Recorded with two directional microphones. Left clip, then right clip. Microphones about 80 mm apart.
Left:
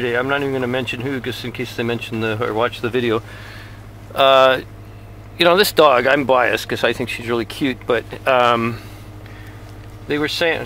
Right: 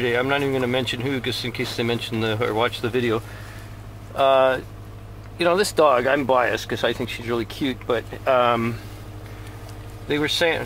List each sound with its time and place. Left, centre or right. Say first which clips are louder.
0.0 s speech: left 2 dB; centre
2.8 s speech: left 4 dB; left
4.1 s speech: left 5 dB; left
5.4 s speech: left 6 dB; left
10.0 s speech: left 2 dB; centre